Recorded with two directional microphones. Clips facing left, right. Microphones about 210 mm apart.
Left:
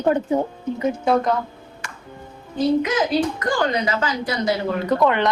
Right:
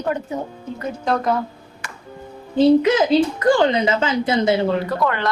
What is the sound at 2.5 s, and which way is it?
Speech, 25° right (ahead or behind).